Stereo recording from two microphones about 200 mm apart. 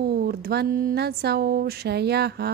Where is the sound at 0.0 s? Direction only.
50° right (ahead or behind).